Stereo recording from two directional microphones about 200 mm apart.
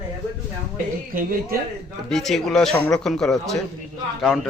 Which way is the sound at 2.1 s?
Centre (ahead or behind).